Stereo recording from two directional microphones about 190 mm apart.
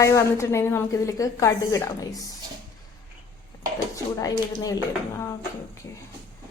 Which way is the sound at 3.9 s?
20° left (ahead or behind).